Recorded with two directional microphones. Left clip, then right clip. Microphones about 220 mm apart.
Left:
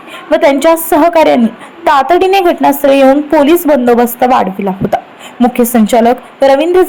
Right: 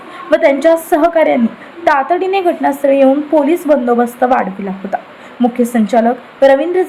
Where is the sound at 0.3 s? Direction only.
15° left (ahead or behind).